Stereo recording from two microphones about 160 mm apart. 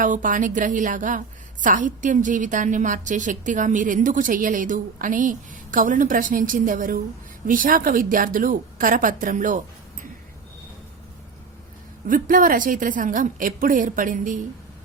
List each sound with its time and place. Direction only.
0.0 s a woman's voice: 55° right (ahead or behind)
12.0 s a woman's voice: 60° right (ahead or behind)